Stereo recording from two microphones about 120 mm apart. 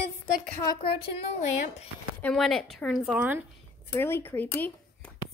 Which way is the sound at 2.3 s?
Centre (ahead or behind).